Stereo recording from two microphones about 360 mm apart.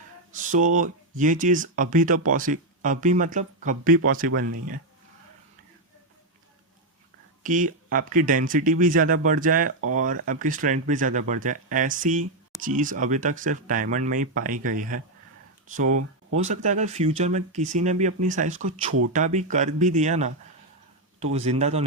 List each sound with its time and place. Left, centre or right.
0.3 s speech: right
7.4 s speech: right